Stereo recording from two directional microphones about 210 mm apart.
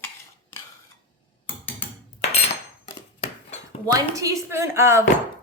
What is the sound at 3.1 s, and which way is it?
Dishes, 30° left (ahead or behind).